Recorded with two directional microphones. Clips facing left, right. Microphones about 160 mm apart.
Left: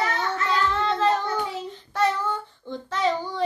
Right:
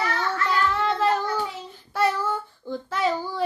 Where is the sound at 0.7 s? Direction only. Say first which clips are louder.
Even; 10° right (ahead or behind).